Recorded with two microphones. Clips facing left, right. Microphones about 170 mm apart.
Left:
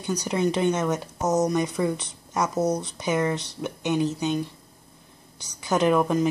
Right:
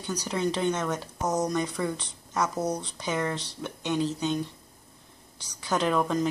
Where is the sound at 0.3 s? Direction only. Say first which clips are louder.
Left 4 dB; 15° left (ahead or behind).